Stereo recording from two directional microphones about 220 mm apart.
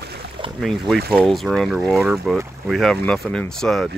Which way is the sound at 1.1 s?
Centre (ahead or behind).